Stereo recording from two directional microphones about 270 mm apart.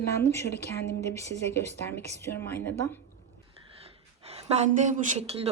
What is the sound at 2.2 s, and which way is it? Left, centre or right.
Speech, centre.